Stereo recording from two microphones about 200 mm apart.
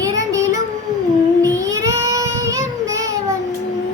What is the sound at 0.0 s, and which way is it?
Child singing, 15° right (ahead or behind).